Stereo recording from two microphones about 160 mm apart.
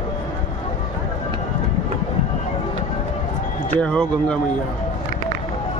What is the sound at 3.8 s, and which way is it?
Speech, 5° left (ahead or behind).